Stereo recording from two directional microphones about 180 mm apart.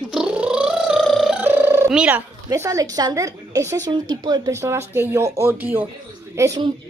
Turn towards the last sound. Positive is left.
turn(degrees=-15)  # may be behind; listen again after turning